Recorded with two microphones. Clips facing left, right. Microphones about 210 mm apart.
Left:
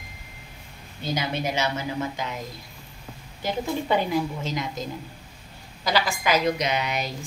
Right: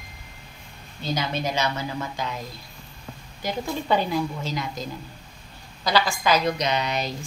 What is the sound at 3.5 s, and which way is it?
A woman's voice, 15° left (ahead or behind).